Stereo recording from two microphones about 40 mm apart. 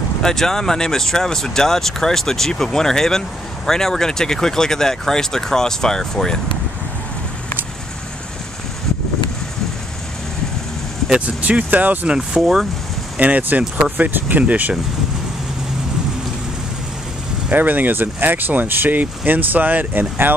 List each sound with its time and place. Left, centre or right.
0.2 s speech: centre
11.1 s speech: right
12.2 s speech: centre
13.2 s speech: right
14.4 s speech: right
17.5 s speech: right